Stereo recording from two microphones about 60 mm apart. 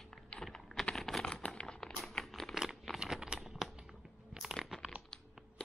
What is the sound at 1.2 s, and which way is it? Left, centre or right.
Patter, centre.